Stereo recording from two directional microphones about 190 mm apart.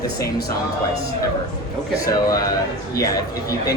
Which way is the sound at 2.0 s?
20° left (ahead or behind).